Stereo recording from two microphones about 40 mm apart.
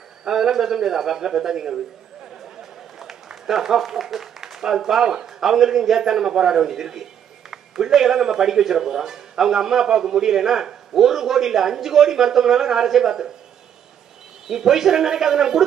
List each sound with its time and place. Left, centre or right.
0.2 s speech: centre
3.0 s a man's voice: centre
14.5 s speech: centre